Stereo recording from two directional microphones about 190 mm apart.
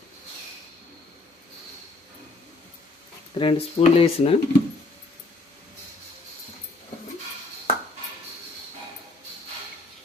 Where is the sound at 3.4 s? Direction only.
30° left (ahead or behind).